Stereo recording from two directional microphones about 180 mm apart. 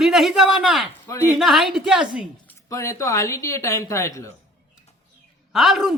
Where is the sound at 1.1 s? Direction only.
15° left (ahead or behind).